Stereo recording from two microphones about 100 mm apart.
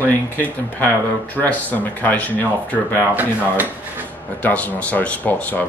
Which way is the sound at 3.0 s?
20° right (ahead or behind).